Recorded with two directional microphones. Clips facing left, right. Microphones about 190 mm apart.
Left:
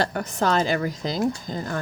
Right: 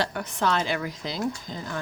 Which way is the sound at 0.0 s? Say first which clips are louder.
Left 3 dB; 45° left (ahead or behind).